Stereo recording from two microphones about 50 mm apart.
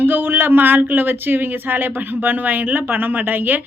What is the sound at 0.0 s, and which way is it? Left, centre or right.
Speech, right.